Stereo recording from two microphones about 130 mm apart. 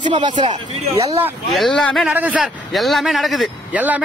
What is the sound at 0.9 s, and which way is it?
Speech, 50° right (ahead or behind).